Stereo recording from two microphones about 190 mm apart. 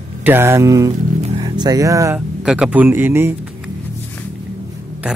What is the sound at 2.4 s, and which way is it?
Speech, 5° right (ahead or behind).